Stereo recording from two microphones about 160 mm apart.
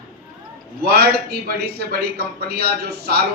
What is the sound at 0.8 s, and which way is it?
A man's voice, 75° right (ahead or behind).